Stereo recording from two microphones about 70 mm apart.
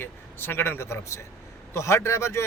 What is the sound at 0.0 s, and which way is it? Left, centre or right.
Speech, left.